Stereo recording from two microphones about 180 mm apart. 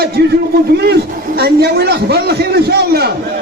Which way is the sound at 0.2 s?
60° right (ahead or behind).